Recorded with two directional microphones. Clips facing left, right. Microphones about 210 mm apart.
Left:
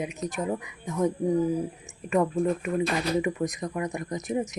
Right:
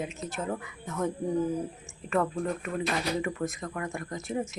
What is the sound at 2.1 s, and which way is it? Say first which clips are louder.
A woman's voice: left 4 dB; 15° left (ahead or behind).